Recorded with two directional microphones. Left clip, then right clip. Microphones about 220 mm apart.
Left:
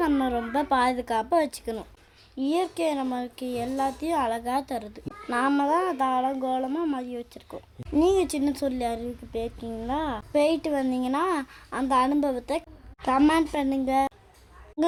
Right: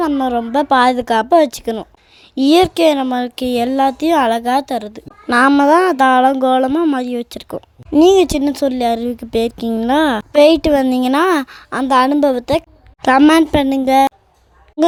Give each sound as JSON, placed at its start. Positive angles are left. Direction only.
{"t": 0.0, "sound": "a woman's voice", "side_deg": -30}
{"t": 2.3, "sound": "speech", "side_deg": -50}
{"t": 14.8, "sound": "speech", "side_deg": -30}